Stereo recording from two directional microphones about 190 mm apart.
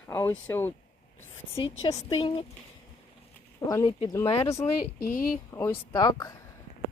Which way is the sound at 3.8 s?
30° left (ahead or behind).